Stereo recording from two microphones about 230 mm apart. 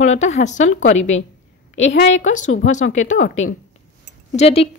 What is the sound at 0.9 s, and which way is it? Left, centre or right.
A woman's voice, left.